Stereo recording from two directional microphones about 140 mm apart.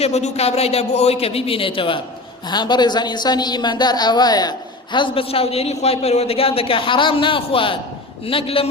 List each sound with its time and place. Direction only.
0.0 s a man's voice: 50° left (ahead or behind)